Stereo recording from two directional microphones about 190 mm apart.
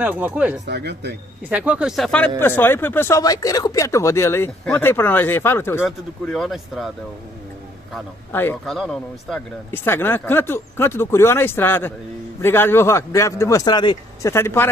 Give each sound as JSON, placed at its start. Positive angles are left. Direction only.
{"t": 0.0, "sound": "speech", "side_deg": -10}
{"t": 0.7, "sound": "speech", "side_deg": -60}
{"t": 1.5, "sound": "speech", "side_deg": -5}
{"t": 5.8, "sound": "speech", "side_deg": 0}
{"t": 8.3, "sound": "speech", "side_deg": 10}